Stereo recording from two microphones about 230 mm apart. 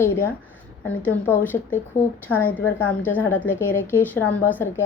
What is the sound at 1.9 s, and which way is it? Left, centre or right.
Speech, left.